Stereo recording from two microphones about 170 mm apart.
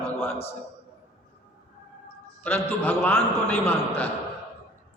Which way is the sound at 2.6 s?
15° left (ahead or behind).